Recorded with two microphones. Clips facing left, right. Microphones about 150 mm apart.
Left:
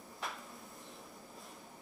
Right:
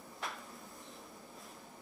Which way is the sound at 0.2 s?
Centre (ahead or behind).